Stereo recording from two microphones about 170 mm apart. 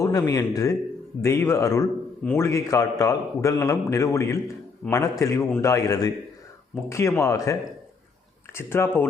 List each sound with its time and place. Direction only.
0.0 s a man's voice: 20° left (ahead or behind)
4.8 s a man's voice: 5° left (ahead or behind)
5.2 s a man's voice: 15° left (ahead or behind)
8.5 s a man's voice: 15° left (ahead or behind)